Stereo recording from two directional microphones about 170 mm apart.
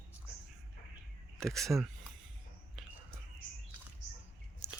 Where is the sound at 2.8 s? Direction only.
Centre (ahead or behind).